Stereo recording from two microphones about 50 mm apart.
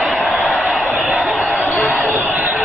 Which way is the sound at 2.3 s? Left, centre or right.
Right.